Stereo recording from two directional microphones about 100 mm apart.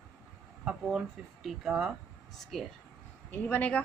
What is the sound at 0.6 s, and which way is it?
A woman's voice, 5° right (ahead or behind).